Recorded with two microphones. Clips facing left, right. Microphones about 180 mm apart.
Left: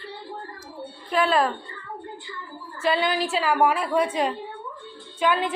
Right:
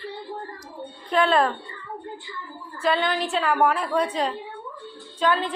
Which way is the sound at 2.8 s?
5° left (ahead or behind).